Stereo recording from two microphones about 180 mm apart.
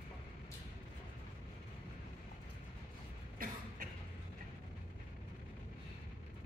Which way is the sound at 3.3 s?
50° right (ahead or behind).